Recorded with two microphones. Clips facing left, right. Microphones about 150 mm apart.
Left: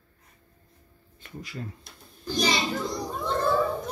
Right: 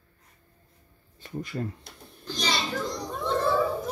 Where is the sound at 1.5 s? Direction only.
45° right (ahead or behind).